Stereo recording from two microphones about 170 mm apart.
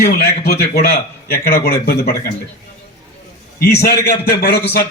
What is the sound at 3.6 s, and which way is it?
A man's voice, 70° left (ahead or behind).